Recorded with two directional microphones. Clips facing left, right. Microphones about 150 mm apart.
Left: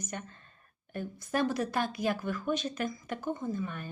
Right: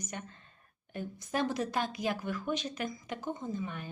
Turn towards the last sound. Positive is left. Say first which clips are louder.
# left 2 dB
turn(degrees=-15)  # may be behind; listen again after turning